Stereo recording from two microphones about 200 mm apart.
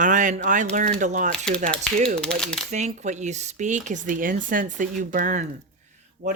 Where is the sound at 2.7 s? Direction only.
35° right (ahead or behind).